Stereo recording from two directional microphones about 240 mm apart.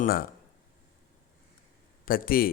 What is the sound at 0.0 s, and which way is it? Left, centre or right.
Speech, left.